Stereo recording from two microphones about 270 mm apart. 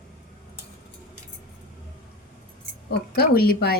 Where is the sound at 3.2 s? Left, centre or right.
Left.